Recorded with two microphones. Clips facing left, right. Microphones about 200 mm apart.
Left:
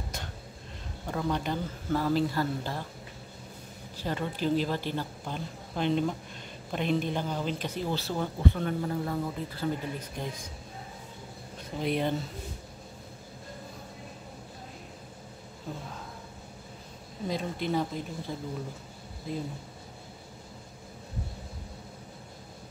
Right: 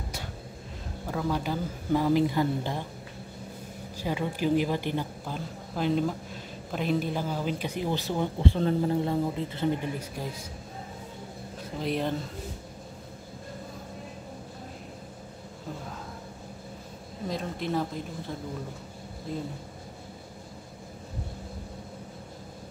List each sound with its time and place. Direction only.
1.0 s speech: 5° right (ahead or behind)
4.0 s speech: 10° right (ahead or behind)
5.2 s a man's voice: 5° right (ahead or behind)
8.5 s speech: 30° right (ahead or behind)
10.2 s speech: 5° right (ahead or behind)
11.8 s speech: centre (ahead or behind)
17.3 s speech: centre (ahead or behind)